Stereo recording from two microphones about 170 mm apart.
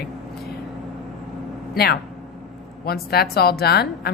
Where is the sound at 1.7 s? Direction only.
65° left (ahead or behind).